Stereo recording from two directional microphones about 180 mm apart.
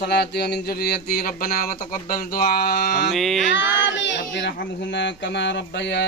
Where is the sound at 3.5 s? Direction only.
85° left.